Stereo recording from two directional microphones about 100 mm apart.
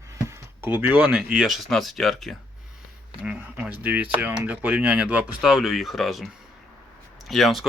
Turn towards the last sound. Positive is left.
turn(degrees=0)  # may be behind; listen again after turning